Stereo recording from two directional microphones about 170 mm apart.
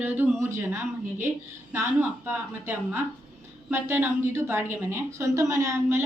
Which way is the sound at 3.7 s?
15° right (ahead or behind).